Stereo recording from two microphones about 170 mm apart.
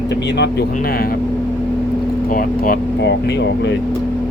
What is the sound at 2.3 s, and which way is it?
Speech, 55° left (ahead or behind).